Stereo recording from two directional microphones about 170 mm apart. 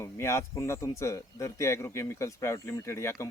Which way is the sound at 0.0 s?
15° left (ahead or behind).